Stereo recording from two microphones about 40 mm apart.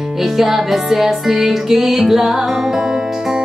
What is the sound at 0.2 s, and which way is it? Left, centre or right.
Music, centre.